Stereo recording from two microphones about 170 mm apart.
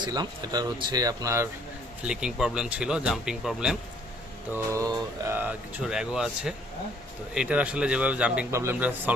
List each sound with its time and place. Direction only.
0.0 s speech: 25° right (ahead or behind)
2.0 s speech: 5° right (ahead or behind)
4.5 s a man's voice: 15° right (ahead or behind)